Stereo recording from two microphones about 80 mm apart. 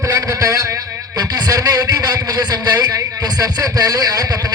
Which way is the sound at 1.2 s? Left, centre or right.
Right.